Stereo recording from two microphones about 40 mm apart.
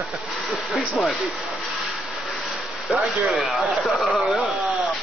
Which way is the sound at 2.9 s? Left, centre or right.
Right.